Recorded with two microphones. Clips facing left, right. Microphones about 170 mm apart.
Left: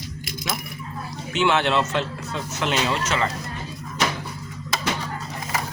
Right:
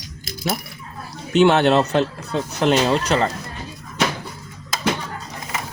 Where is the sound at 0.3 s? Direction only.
40° right (ahead or behind).